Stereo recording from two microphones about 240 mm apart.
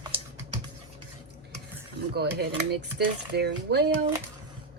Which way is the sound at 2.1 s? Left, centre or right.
Right.